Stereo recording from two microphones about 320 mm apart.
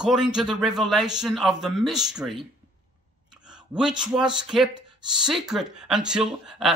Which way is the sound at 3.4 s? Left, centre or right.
Centre.